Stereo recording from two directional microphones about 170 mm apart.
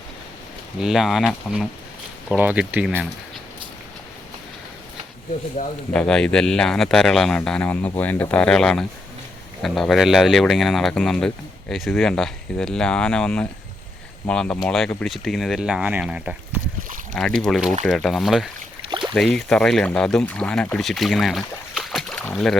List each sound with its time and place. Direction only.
0.8 s speech: centre (ahead or behind)
5.6 s speech: 40° left (ahead or behind)
5.9 s speech: 5° left (ahead or behind)